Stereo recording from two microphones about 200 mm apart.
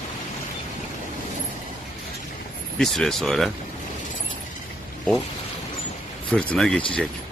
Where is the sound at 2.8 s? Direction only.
Centre (ahead or behind).